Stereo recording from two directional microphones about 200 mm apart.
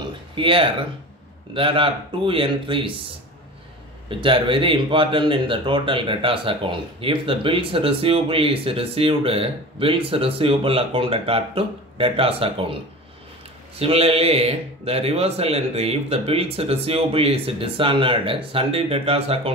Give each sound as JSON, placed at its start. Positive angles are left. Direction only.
{"t": 0.4, "sound": "speech", "side_deg": -25}
{"t": 4.1, "sound": "speech", "side_deg": -25}
{"t": 13.7, "sound": "speech", "side_deg": -30}